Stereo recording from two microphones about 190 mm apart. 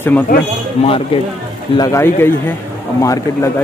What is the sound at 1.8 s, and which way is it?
Speech, 15° left (ahead or behind).